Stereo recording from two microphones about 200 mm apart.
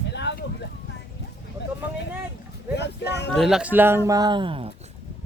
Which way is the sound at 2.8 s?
60° left (ahead or behind).